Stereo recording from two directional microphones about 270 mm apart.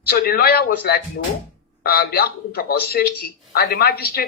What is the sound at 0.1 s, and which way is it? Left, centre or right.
A woman's voice, left.